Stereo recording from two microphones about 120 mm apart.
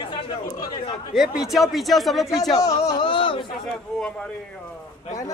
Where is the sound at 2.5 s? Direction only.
30° left (ahead or behind).